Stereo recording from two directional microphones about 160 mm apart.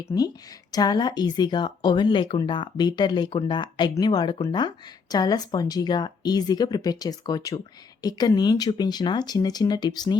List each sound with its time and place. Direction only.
0.1 s speech: 20° left (ahead or behind)